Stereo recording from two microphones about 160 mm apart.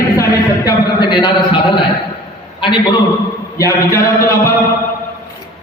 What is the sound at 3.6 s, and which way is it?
Speech, 20° left (ahead or behind).